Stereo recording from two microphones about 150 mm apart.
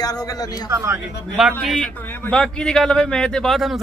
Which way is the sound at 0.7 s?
20° right (ahead or behind).